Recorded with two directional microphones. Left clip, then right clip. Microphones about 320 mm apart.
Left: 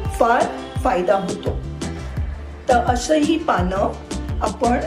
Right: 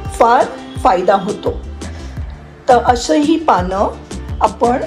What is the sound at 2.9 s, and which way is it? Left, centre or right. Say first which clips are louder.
Speech: right 5 dB; centre.